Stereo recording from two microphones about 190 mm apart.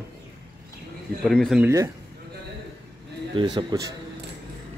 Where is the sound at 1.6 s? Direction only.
15° right (ahead or behind).